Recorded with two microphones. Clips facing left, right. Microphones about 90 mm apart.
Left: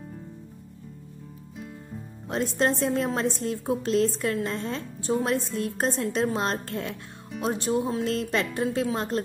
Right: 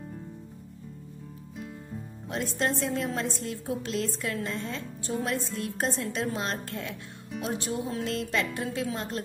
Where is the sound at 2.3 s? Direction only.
40° left (ahead or behind).